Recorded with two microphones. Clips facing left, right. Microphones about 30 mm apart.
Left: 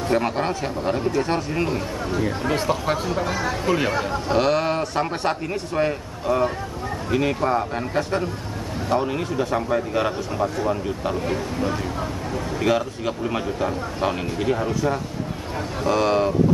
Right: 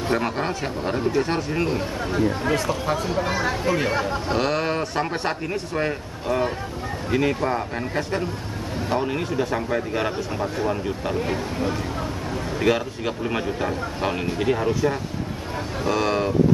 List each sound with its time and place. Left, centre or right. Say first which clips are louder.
0.1 s speech: left 2 dB; centre
2.5 s speech: left 1 dB; left
3.3 s speech: right 1 dB; centre
3.6 s speech: left 3 dB; centre
15.8 s speech: left 3 dB; centre